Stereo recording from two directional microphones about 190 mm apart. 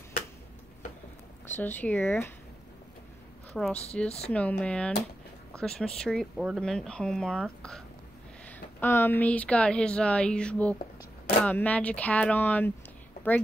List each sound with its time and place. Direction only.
1.5 s speech: 10° left (ahead or behind)
3.5 s speech: centre (ahead or behind)